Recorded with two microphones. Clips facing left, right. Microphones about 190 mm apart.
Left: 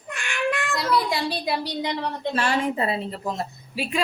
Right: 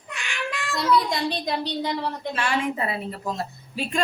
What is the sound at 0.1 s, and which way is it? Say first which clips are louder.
Child singing: left 6 dB; 50° left (ahead or behind).